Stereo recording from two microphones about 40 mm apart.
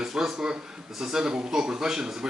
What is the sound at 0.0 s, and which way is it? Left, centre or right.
A man's voice, centre.